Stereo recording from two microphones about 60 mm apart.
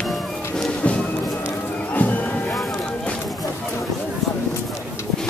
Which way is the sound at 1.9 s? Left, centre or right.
Left.